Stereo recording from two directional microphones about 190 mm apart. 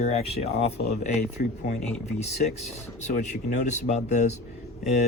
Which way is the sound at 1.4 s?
50° left (ahead or behind).